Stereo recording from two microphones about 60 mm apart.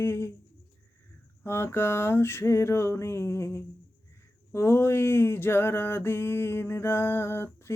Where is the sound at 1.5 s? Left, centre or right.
Left.